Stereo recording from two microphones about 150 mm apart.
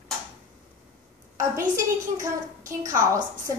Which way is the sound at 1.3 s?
20° right (ahead or behind).